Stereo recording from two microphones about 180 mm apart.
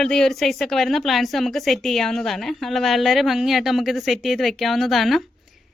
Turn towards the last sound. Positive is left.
turn(degrees=0)  # may be behind; listen again after turning